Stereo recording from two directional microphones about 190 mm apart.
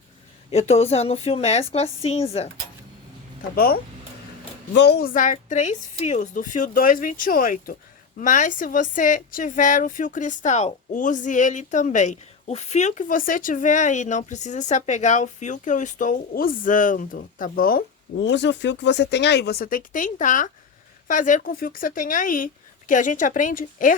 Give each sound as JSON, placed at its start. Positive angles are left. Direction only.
{"t": 0.5, "sound": "speech", "side_deg": 35}
{"t": 3.5, "sound": "speech", "side_deg": 55}
{"t": 18.2, "sound": "speech", "side_deg": 65}